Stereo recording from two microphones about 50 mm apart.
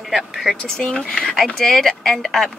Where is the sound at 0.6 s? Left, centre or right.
Centre.